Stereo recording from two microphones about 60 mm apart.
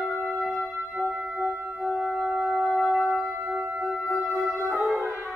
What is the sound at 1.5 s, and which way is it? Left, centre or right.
Music, right.